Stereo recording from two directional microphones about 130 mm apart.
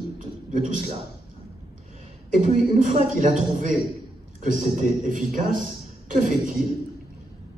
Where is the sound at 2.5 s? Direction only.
80° right.